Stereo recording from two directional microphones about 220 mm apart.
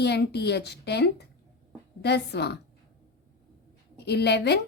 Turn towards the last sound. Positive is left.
turn(degrees=50)  # may be behind; listen again after turning